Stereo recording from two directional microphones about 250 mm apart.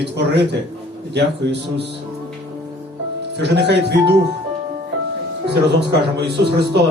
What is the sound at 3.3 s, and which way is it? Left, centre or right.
Speech, right.